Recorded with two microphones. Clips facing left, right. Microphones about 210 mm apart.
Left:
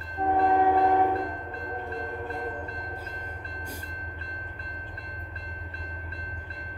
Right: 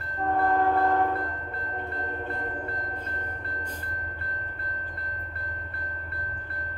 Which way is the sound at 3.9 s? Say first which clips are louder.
Right 3 dB; 55° right (ahead or behind).